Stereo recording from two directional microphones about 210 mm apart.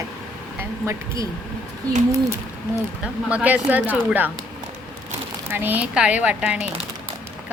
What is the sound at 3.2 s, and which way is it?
Speech, 5° right (ahead or behind).